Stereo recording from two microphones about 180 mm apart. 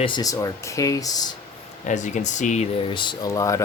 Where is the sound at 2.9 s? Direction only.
25° left (ahead or behind).